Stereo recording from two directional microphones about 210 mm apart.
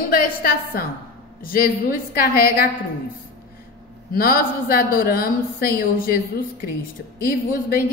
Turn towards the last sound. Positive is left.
turn(degrees=45)  # may be behind; listen again after turning